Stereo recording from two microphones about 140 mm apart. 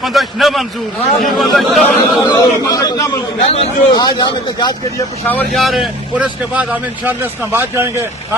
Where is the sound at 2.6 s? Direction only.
25° left (ahead or behind).